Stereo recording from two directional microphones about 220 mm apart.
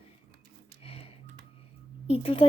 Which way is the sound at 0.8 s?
25° left (ahead or behind).